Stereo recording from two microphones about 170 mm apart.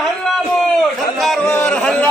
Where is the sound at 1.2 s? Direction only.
Centre (ahead or behind).